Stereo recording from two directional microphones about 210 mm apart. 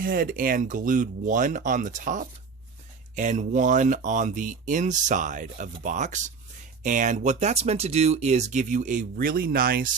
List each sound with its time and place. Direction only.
0.0 s speech: 40° right (ahead or behind)